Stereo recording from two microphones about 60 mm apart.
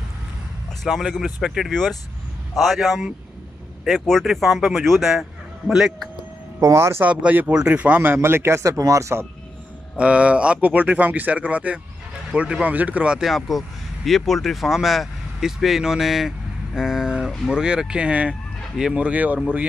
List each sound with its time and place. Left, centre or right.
0.8 s speech: centre
6.6 s speech: right
7.1 s speech: right
8.7 s speech: right
9.9 s speech: centre
12.6 s speech: right
13.2 s speech: centre; by 19.7 s right